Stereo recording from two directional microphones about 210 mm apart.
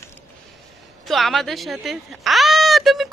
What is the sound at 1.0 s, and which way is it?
Speech, centre (ahead or behind).